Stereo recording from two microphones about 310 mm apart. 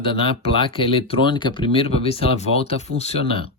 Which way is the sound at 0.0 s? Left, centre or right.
Centre.